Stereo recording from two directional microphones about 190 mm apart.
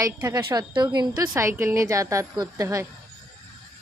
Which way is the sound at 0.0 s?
15° right (ahead or behind).